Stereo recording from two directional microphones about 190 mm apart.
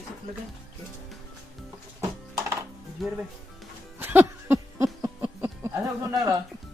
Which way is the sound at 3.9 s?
10° right (ahead or behind).